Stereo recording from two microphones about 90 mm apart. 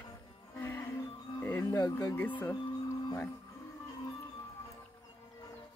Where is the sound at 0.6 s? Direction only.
25° left (ahead or behind).